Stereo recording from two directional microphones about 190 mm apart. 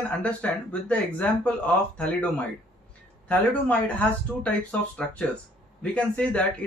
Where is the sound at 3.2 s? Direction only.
5° left (ahead or behind).